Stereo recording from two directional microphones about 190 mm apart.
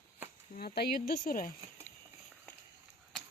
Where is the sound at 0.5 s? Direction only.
55° left (ahead or behind).